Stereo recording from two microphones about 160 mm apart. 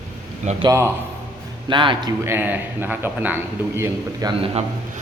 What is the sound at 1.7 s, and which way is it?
Speech, 30° right (ahead or behind).